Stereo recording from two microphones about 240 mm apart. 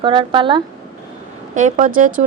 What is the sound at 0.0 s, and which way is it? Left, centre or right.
Speech, centre.